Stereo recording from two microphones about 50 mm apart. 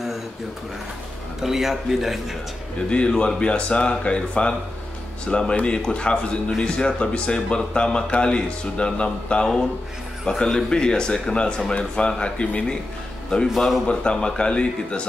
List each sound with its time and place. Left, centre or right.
1.4 s a man's voice: centre
2.9 s speech: left
13.6 s a man's voice: centre
13.8 s speech: centre